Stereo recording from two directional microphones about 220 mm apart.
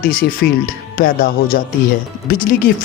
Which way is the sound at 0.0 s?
40° left (ahead or behind).